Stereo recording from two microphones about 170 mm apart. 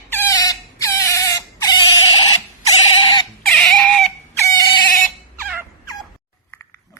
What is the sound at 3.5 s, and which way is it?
Chicken, 5° left (ahead or behind).